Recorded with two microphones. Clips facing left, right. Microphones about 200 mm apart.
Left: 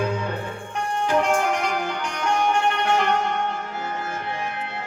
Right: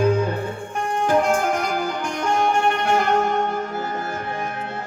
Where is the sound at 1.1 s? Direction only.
40° right (ahead or behind).